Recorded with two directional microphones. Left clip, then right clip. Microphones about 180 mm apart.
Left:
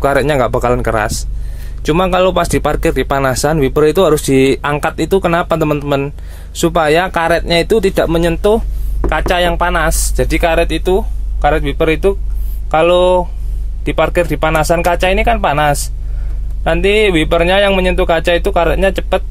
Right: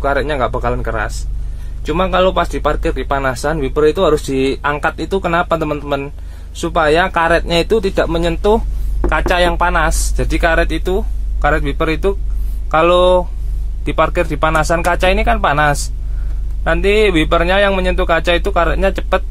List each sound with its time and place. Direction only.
0.0 s speech: 35° left (ahead or behind); by 19.2 s 15° left (ahead or behind)